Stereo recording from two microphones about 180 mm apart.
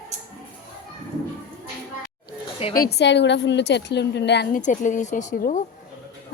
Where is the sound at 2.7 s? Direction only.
60° left (ahead or behind).